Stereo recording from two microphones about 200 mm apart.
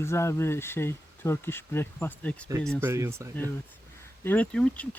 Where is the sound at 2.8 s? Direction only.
10° right (ahead or behind).